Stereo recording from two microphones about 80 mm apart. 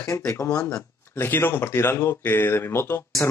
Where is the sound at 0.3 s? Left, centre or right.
Left.